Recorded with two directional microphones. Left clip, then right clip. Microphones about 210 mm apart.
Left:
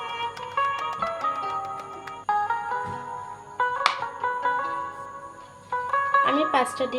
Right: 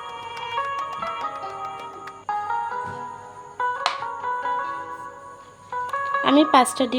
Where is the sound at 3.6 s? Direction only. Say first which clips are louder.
Left 1 dB; centre (ahead or behind).